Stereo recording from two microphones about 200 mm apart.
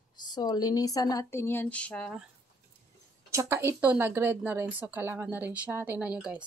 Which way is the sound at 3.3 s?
15° right (ahead or behind).